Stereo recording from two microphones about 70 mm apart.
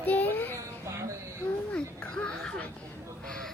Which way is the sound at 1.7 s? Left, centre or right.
Centre.